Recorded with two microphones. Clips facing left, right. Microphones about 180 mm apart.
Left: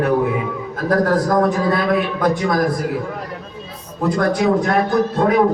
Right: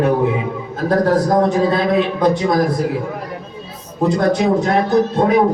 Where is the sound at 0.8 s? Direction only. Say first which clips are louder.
Right 2 dB; 25° right (ahead or behind).